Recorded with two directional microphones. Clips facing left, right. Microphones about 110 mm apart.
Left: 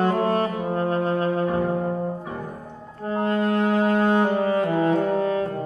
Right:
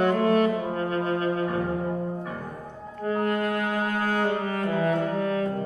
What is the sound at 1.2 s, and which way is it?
Music, 30° left (ahead or behind).